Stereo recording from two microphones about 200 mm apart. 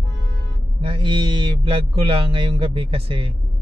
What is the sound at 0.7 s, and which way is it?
Speech, 25° right (ahead or behind).